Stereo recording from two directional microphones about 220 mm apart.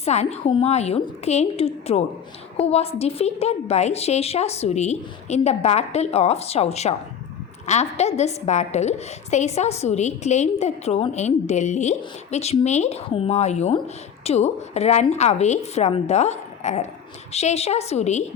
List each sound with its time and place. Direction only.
0.0 s a woman's voice: 30° left (ahead or behind)